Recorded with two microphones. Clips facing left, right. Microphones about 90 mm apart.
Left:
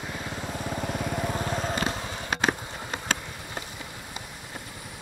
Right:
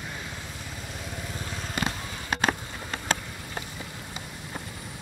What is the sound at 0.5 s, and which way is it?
Vehicle, 60° left (ahead or behind).